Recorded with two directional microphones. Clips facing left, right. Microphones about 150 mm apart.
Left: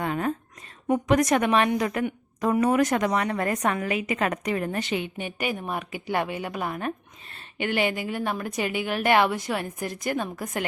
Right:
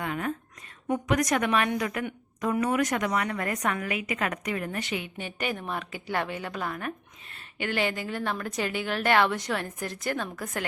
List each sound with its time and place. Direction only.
0.0 s a woman's voice: 35° left (ahead or behind)
7.6 s a woman's voice: 15° left (ahead or behind)